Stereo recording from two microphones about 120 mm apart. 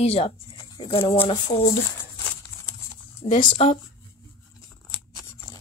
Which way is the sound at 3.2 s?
90° left.